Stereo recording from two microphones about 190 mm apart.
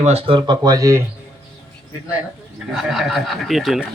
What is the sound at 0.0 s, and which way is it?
Speech, 30° right (ahead or behind).